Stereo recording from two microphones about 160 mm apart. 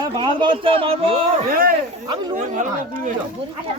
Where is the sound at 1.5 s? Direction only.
65° right (ahead or behind).